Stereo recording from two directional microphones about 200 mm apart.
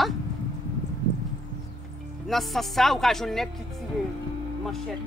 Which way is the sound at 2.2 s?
Centre (ahead or behind).